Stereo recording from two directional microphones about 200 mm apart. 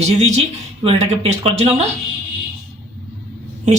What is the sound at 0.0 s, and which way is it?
A woman's voice, 35° right (ahead or behind).